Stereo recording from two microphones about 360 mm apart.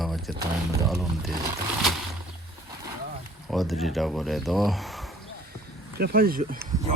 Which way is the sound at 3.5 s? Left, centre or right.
Centre.